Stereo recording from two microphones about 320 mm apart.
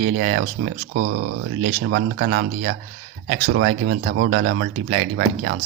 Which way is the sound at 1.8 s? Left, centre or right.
Right.